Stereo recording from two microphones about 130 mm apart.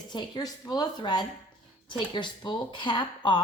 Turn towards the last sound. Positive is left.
turn(degrees=35)  # may be behind; listen again after turning